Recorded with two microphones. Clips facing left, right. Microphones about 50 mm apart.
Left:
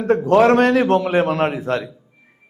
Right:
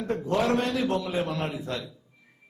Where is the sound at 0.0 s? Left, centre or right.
Left.